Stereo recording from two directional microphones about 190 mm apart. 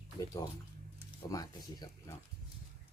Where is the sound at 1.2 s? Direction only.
20° left (ahead or behind).